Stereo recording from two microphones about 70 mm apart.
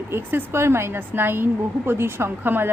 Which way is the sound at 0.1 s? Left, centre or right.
Right.